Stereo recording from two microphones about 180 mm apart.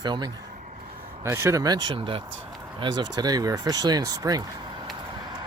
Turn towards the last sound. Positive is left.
turn(degrees=-20)  # may be behind; listen again after turning